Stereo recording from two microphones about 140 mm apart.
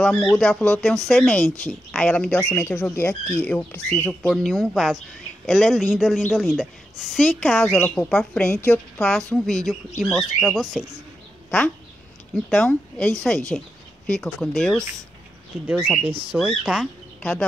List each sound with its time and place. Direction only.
0.0 s a woman's voice: 5° left (ahead or behind)
12.4 s a woman's voice: 10° left (ahead or behind)
16.0 s speech: 40° right (ahead or behind)
16.3 s a woman's voice: 5° right (ahead or behind)